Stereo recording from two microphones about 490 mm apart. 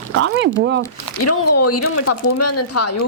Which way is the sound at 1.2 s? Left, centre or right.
Left.